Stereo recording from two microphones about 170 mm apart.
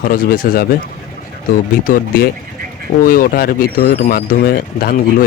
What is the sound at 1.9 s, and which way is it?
Speech, 55° left (ahead or behind).